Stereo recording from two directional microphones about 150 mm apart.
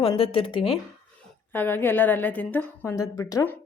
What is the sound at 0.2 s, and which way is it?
Speech, 35° left (ahead or behind).